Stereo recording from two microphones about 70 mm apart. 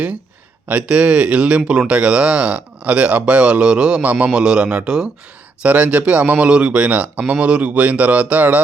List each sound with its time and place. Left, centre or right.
0.7 s speech: centre